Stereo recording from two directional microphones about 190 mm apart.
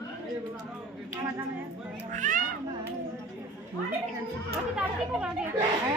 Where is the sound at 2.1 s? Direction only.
40° right (ahead or behind).